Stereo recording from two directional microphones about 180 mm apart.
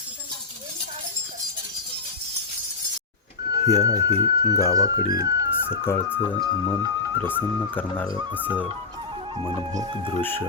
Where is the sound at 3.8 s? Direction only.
20° right (ahead or behind).